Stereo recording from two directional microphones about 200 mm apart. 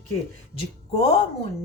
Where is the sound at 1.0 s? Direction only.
30° left (ahead or behind).